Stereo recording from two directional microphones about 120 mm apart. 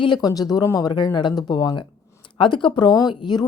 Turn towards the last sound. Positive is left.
turn(degrees=35)  # may be behind; listen again after turning